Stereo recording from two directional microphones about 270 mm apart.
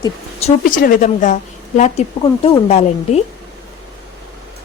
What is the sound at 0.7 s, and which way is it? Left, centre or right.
Speech, left.